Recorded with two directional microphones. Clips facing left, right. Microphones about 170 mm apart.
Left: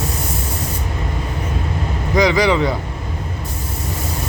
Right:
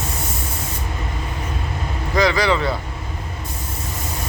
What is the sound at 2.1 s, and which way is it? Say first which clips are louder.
Speech: left 3 dB; 15° left (ahead or behind).